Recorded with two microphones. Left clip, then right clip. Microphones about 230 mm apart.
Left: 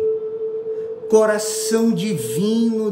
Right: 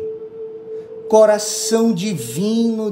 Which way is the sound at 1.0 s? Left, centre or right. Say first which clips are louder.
Right 4 dB; centre.